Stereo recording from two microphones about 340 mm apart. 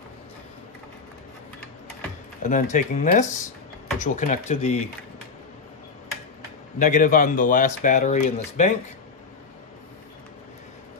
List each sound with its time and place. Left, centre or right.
2.4 s speech: left
6.8 s speech: left